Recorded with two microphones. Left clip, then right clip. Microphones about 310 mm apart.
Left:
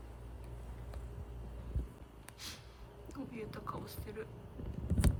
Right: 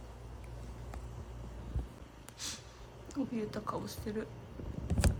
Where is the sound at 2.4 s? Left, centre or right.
Centre.